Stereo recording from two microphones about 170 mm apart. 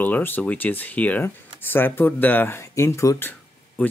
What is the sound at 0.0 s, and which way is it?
Speech, 10° left (ahead or behind).